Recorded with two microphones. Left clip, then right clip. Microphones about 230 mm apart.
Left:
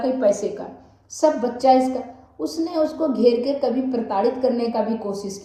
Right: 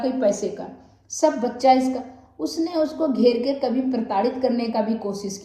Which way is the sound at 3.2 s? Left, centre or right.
Centre.